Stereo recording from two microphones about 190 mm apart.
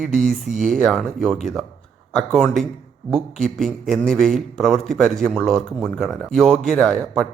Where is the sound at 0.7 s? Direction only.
Centre (ahead or behind).